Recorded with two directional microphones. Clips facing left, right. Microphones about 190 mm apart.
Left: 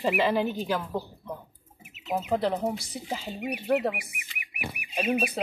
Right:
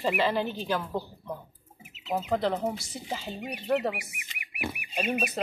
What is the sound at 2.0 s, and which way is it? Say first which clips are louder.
Speech: left 1 dB; 15° left (ahead or behind).